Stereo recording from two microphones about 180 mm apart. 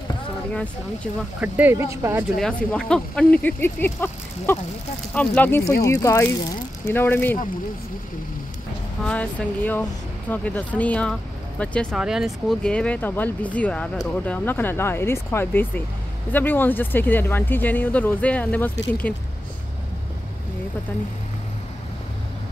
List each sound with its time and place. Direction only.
1.4 s speech: 10° right (ahead or behind)
2.3 s speech: 5° left (ahead or behind)
9.0 s speech: 5° left (ahead or behind)